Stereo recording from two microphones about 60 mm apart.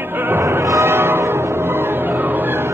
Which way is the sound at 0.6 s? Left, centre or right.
Right.